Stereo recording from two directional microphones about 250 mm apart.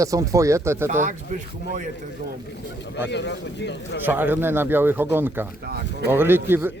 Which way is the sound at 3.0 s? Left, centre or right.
Left.